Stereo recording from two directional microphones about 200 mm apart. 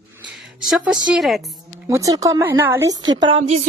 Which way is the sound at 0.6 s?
Centre (ahead or behind).